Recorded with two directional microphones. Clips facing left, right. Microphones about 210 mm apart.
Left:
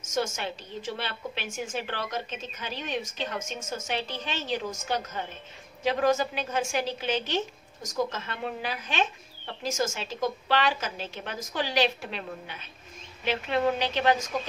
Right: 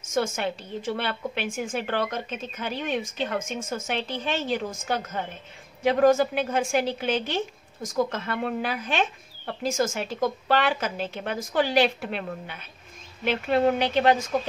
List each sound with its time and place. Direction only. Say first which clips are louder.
0.1 s a woman's voice: right 4 dB; 55° right (ahead or behind)